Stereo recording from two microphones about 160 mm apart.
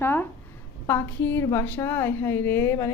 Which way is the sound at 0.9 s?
15° left (ahead or behind).